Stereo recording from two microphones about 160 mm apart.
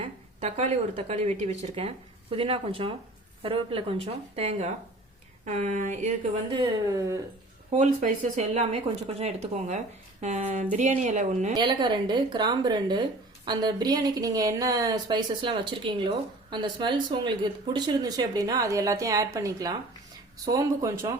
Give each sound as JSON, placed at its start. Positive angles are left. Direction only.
{"t": 0.0, "sound": "a woman's voice", "side_deg": -45}
{"t": 6.5, "sound": "speech", "side_deg": -25}
{"t": 7.7, "sound": "speech", "side_deg": -45}
{"t": 11.5, "sound": "speech", "side_deg": -30}